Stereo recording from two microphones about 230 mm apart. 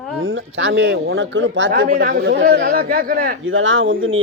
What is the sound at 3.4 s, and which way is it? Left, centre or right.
Speech, right.